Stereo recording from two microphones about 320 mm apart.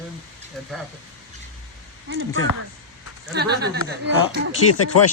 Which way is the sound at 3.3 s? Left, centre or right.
Right.